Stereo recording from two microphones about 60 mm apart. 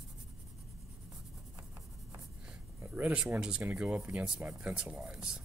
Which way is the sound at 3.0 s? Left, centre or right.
Centre.